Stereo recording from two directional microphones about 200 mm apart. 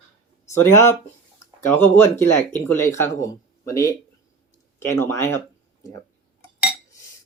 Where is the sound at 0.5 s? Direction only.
15° left (ahead or behind).